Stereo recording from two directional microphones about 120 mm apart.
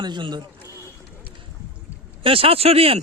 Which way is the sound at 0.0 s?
40° right (ahead or behind).